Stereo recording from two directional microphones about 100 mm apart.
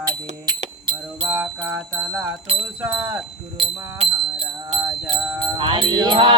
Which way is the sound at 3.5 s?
65° right (ahead or behind).